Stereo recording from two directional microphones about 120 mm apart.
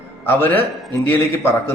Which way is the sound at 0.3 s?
20° left (ahead or behind).